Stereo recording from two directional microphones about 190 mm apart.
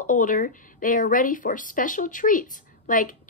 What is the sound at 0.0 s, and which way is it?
Speech, 45° left (ahead or behind).